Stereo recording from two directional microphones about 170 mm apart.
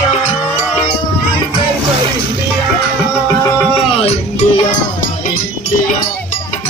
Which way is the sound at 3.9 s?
35° left (ahead or behind).